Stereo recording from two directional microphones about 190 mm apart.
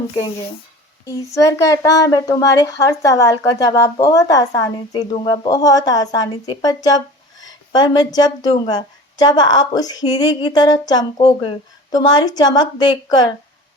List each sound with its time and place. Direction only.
1.3 s a woman's voice: 15° left (ahead or behind)